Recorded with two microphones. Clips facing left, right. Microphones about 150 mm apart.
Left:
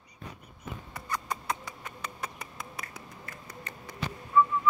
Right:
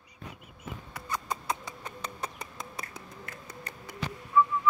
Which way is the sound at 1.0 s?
25° right (ahead or behind).